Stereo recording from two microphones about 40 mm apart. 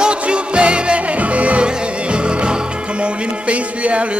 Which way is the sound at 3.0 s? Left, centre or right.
Right.